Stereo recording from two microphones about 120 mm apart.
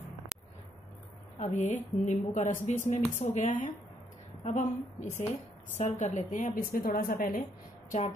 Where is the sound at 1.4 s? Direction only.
85° left.